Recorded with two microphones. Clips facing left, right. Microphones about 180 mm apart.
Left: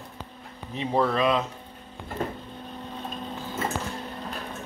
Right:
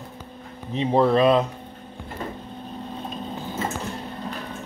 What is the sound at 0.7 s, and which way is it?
Speech, 25° right (ahead or behind).